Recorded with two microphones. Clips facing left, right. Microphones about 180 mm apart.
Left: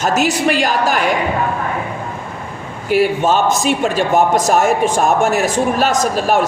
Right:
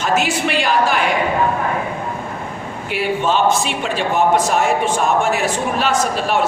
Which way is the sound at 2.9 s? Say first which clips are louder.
Left 5 dB; 40° left (ahead or behind).